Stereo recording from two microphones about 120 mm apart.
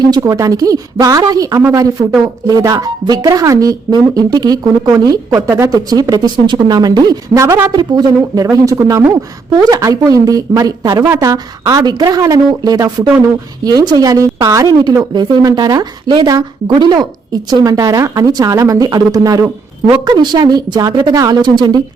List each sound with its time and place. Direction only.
0.0 s a woman's voice: 35° right (ahead or behind)
5.9 s a woman's voice: 30° right (ahead or behind)